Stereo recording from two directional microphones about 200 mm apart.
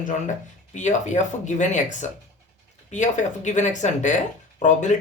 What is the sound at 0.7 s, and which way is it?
Speech, 35° left (ahead or behind).